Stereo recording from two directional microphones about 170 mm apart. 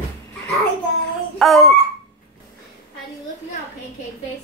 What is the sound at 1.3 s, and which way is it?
Speech, centre (ahead or behind).